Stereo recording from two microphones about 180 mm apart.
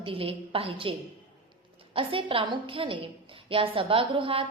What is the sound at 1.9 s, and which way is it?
A woman's voice, 30° right (ahead or behind).